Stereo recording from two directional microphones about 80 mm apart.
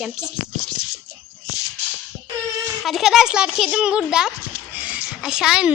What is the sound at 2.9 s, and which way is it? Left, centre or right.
A child's voice, centre.